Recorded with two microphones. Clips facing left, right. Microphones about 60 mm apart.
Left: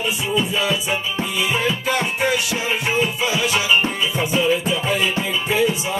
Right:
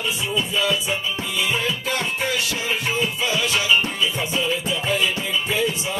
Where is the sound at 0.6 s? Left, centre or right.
Centre.